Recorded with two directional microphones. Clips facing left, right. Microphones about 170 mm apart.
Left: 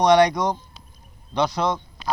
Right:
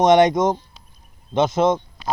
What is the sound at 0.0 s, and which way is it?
Speech, 20° right (ahead or behind).